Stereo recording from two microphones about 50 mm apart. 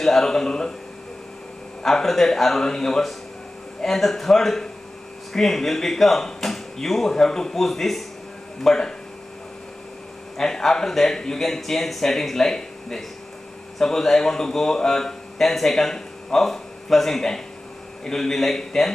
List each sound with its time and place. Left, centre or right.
0.0 s speech: centre
1.8 s a man's voice: centre
10.3 s a man's voice: centre